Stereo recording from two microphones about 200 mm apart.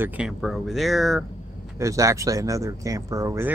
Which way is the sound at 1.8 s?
15° right (ahead or behind).